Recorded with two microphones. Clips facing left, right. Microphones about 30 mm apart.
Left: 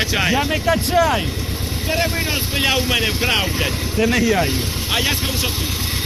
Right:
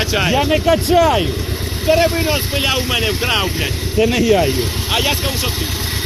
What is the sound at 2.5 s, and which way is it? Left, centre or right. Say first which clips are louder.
Speech: right 1 dB; centre.